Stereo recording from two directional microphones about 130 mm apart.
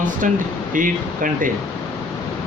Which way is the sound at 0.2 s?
80° right.